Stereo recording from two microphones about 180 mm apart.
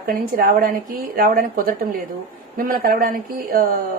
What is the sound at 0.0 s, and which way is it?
A woman's voice, 55° right (ahead or behind).